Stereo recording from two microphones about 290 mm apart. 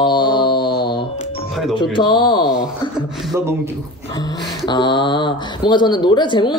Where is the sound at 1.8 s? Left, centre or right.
Centre.